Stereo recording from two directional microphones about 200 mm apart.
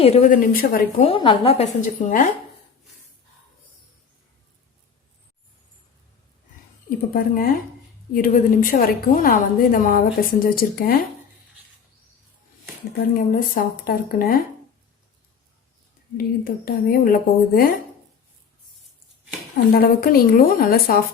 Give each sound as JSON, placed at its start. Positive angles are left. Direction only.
{"t": 0.0, "sound": "a woman's voice", "side_deg": 35}
{"t": 1.0, "sound": "a woman's voice", "side_deg": 25}
{"t": 7.1, "sound": "a woman's voice", "side_deg": 45}
{"t": 13.0, "sound": "a woman's voice", "side_deg": 45}
{"t": 16.1, "sound": "a woman's voice", "side_deg": 50}
{"t": 19.7, "sound": "a woman's voice", "side_deg": 45}